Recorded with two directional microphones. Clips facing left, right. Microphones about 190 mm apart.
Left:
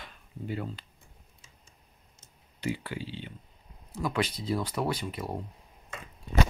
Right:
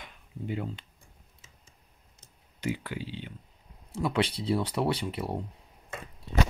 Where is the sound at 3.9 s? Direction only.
30° right (ahead or behind).